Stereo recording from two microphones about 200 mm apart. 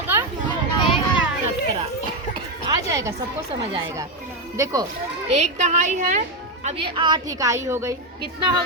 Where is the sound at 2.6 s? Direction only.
15° right (ahead or behind).